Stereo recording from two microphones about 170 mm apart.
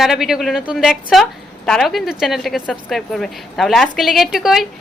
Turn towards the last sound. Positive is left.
turn(degrees=0)  # may be behind; listen again after turning